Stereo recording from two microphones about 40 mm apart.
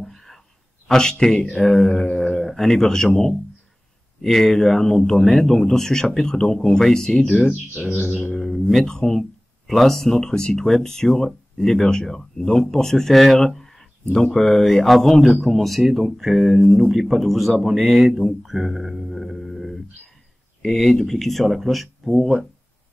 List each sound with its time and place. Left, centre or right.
0.0 s a sound: centre
0.8 s speech: centre
4.2 s speech: centre
7.4 s speech: centre
8.4 s speech: centre